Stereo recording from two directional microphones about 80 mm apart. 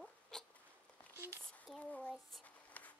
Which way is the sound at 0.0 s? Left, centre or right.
Centre.